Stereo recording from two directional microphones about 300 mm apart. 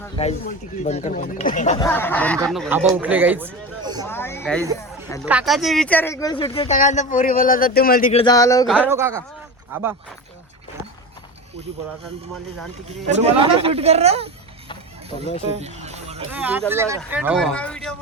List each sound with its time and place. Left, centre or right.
0.2 s speech: left
1.8 s speech: centre
4.0 s speech: centre
5.2 s speech: centre; by 8.2 s left
8.2 s speech: centre
8.9 s speech: centre
12.9 s speech: right
15.4 s music: right
16.3 s speech: centre